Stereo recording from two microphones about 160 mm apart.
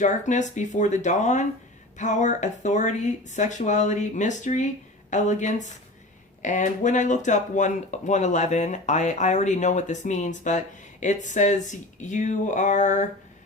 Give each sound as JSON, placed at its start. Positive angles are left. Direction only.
{"t": 0.0, "sound": "speech", "side_deg": 50}